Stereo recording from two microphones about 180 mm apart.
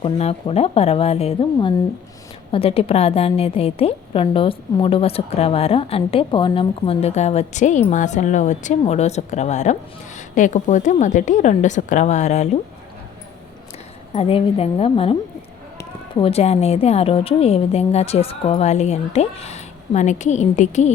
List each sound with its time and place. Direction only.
0.0 s a woman's voice: 35° left (ahead or behind)
2.5 s a woman's voice: 30° left (ahead or behind)
14.1 s a woman's voice: 35° left (ahead or behind)
16.2 s a woman's voice: 35° left (ahead or behind)